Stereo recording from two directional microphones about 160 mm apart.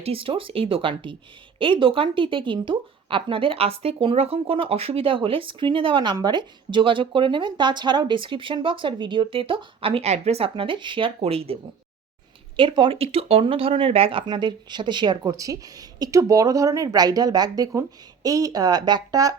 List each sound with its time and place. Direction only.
0.0 s speech: 35° right (ahead or behind)
12.5 s speech: 30° right (ahead or behind)